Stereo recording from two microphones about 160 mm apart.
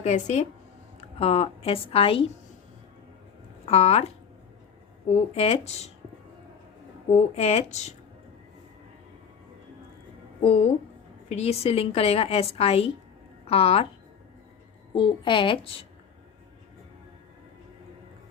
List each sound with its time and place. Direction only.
0.0 s a woman's voice: 45° left (ahead or behind)
3.7 s a woman's voice: 40° left (ahead or behind)
7.1 s speech: 40° left (ahead or behind)
11.3 s a woman's voice: 45° left (ahead or behind)
14.9 s a woman's voice: 30° left (ahead or behind)